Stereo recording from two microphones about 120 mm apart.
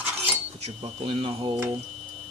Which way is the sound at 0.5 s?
60° right (ahead or behind).